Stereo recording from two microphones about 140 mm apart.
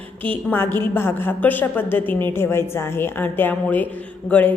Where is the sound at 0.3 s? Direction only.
15° left (ahead or behind).